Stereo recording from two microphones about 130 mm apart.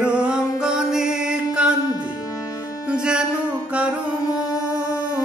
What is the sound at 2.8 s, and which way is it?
Music, 5° right (ahead or behind).